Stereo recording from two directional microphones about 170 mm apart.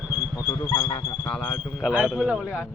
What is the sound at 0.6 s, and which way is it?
Speech, 20° left (ahead or behind).